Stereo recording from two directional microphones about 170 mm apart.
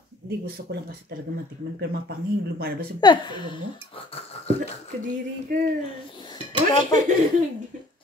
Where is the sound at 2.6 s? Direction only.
65° right (ahead or behind).